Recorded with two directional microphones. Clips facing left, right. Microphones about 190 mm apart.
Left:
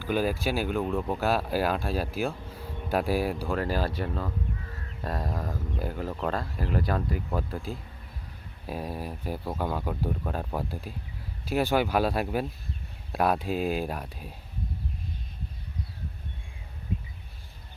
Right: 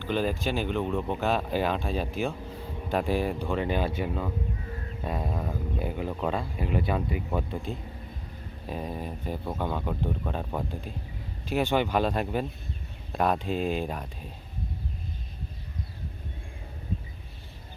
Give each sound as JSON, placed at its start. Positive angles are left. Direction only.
{"t": 0.0, "sound": "speech", "side_deg": 10}